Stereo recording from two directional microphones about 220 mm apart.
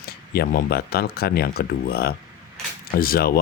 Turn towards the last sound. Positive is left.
turn(degrees=45)  # may be behind; listen again after turning